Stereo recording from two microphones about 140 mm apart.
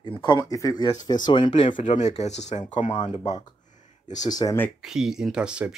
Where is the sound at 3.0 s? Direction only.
30° left (ahead or behind).